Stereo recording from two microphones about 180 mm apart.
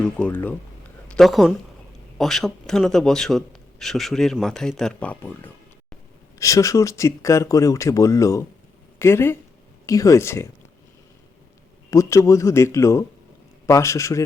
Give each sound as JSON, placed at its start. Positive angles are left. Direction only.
{"t": 0.0, "sound": "a woman's voice", "side_deg": 10}
{"t": 11.9, "sound": "speech", "side_deg": 15}